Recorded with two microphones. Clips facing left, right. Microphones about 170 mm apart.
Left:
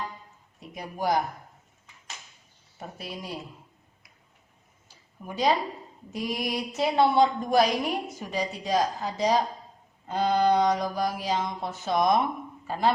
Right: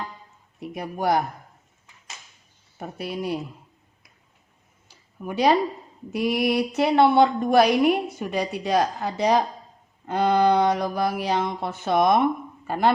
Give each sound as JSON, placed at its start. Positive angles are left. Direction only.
{"t": 0.7, "sound": "a woman's voice", "side_deg": -60}
{"t": 3.0, "sound": "a woman's voice", "side_deg": -65}
{"t": 5.2, "sound": "a woman's voice", "side_deg": -70}